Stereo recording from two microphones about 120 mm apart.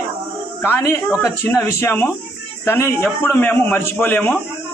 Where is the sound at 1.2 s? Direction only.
20° left (ahead or behind).